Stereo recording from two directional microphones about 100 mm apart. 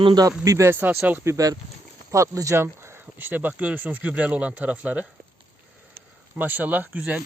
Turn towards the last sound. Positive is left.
turn(degrees=-15)  # may be behind; listen again after turning